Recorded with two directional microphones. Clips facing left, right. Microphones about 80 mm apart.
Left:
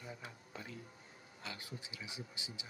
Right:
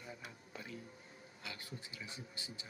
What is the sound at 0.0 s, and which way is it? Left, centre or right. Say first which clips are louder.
Music: left 1 dB; left.